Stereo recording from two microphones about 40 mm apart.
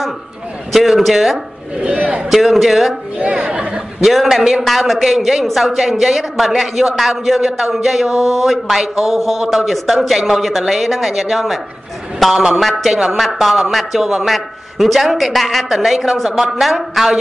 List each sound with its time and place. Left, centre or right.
0.7 s a man's voice: centre
1.8 s speech: right
2.2 s a man's voice: centre
3.3 s speech: right
4.0 s a man's voice: centre